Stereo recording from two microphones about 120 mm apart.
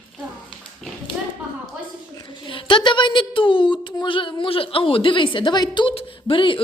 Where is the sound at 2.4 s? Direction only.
45° left (ahead or behind).